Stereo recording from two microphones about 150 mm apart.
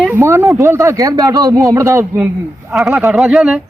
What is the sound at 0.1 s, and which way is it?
A man's voice, 15° right (ahead or behind).